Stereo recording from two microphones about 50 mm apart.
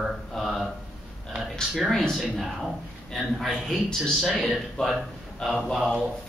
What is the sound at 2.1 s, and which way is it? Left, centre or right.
Speech, centre.